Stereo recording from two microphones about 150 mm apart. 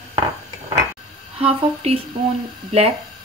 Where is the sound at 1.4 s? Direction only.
40° right (ahead or behind).